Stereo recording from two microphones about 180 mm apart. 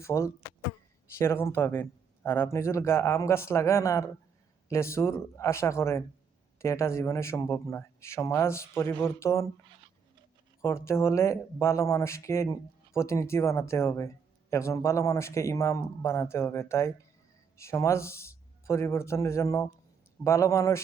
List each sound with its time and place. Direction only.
0.0 s speech: 15° left (ahead or behind)
10.6 s speech: 15° left (ahead or behind)